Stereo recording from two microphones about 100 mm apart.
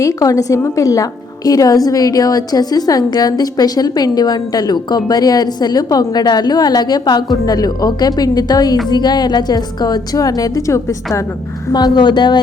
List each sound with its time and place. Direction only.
0.0 s a woman's voice: 35° left (ahead or behind)
11.7 s a woman's voice: 45° left (ahead or behind)